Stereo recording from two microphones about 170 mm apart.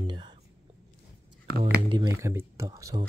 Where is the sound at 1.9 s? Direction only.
25° right (ahead or behind).